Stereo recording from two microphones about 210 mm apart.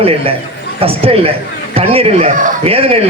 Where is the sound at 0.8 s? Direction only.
25° right (ahead or behind).